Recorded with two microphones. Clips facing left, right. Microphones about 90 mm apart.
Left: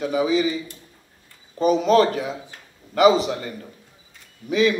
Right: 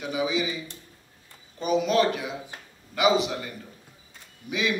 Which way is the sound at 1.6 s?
35° left (ahead or behind).